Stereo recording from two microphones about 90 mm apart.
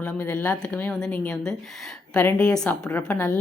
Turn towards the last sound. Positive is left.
turn(degrees=20)  # may be behind; listen again after turning